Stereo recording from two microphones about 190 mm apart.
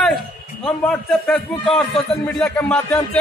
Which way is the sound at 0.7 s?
5° left (ahead or behind).